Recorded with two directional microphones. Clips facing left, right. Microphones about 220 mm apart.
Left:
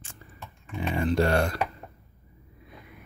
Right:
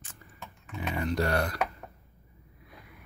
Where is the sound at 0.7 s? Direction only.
30° left (ahead or behind).